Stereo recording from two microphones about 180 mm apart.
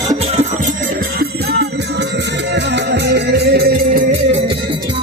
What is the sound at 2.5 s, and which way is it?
Music, 70° right (ahead or behind).